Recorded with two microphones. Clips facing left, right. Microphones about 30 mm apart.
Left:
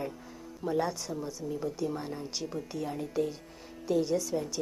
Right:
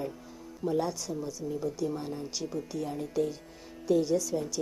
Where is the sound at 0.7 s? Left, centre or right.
Centre.